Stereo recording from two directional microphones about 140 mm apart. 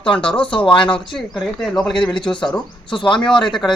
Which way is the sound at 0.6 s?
35° left (ahead or behind).